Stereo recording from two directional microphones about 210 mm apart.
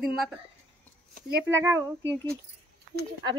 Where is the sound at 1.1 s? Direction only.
45° right (ahead or behind).